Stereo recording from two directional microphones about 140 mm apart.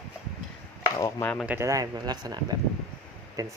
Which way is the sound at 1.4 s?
20° right (ahead or behind).